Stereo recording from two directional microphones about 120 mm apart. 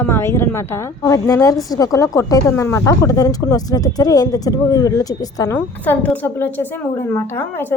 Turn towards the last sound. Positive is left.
turn(degrees=15)  # may be behind; listen again after turning